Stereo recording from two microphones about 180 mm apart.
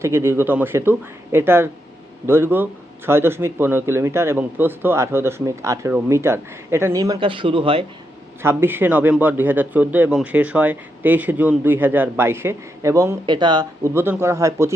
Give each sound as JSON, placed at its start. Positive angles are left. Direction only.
{"t": 0.0, "sound": "a man's voice", "side_deg": -15}
{"t": 8.4, "sound": "a man's voice", "side_deg": -10}
{"t": 13.9, "sound": "a man's voice", "side_deg": -15}